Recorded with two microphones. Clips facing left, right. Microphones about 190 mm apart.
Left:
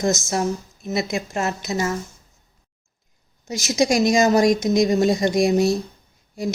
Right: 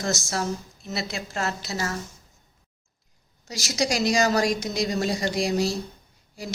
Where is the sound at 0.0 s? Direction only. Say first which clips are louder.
Left 6 dB; 20° left (ahead or behind).